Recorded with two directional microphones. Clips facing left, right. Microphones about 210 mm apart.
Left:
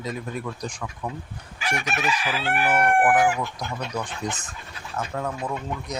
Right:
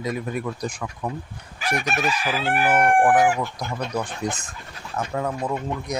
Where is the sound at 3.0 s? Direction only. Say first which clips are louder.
Right 2 dB; 25° right (ahead or behind).